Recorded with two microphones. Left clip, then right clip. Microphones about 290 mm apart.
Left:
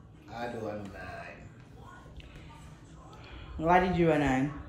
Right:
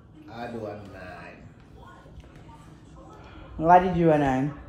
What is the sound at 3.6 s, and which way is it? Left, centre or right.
Speech, centre.